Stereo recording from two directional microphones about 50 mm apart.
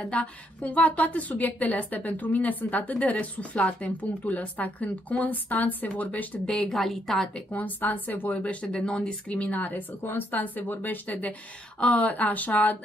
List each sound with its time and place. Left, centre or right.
0.1 s a woman's voice: left
6.4 s a woman's voice: centre
6.8 s a woman's voice: centre
7.5 s speech: left
9.6 s a woman's voice: left